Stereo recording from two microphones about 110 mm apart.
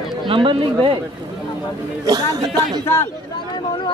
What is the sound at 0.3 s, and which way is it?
Speech, 50° right (ahead or behind).